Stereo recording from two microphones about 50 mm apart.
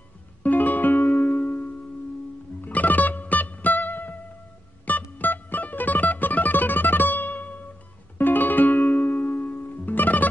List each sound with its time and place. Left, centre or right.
0.4 s music: left